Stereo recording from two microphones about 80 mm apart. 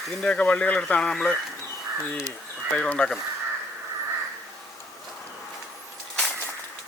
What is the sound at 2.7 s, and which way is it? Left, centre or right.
Speech, centre.